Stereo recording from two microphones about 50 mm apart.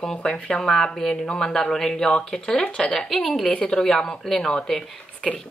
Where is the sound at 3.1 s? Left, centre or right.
Centre.